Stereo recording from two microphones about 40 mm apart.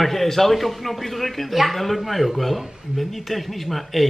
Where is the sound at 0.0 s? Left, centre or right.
Centre.